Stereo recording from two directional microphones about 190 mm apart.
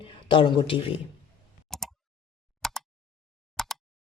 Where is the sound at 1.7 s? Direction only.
Centre (ahead or behind).